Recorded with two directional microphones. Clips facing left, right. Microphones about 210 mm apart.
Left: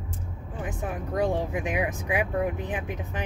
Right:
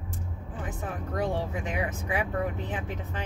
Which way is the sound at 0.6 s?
15° left (ahead or behind).